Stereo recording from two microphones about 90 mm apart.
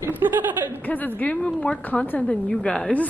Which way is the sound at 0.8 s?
20° left (ahead or behind).